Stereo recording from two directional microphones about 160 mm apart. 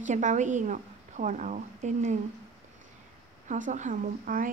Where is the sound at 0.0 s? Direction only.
50° right (ahead or behind).